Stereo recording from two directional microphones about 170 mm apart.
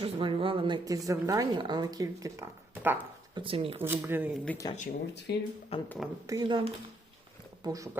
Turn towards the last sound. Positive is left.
turn(degrees=-20)  # may be behind; listen again after turning